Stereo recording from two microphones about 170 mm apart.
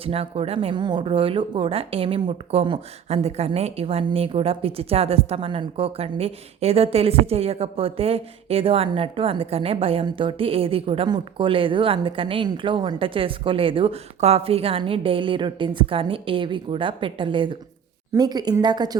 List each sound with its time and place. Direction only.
0.0 s a woman's voice: 35° right (ahead or behind)